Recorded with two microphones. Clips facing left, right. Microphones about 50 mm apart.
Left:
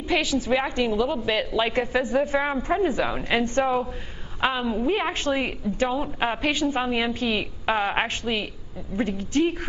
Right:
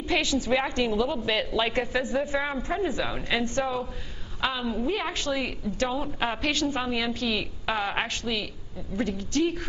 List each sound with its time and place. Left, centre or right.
0.1 s a woman's voice: centre
1.9 s a man's voice: left
3.3 s a woman's voice: left
4.6 s a woman's voice: centre
4.9 s a man's voice: left
5.9 s a woman's voice: centre